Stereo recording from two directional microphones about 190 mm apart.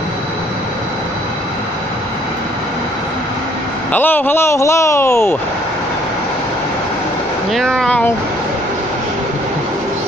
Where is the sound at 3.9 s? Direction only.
10° left (ahead or behind).